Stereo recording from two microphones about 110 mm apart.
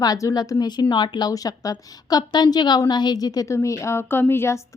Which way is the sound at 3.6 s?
25° left (ahead or behind).